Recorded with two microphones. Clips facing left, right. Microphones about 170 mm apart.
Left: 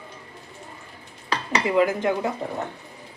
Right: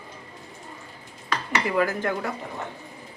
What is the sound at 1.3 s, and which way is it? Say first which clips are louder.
Speech: left 3 dB; 20° left (ahead or behind).